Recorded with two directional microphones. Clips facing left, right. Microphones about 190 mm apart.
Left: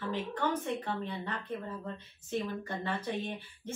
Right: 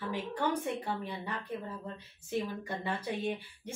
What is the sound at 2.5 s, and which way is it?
Speech, 10° right (ahead or behind).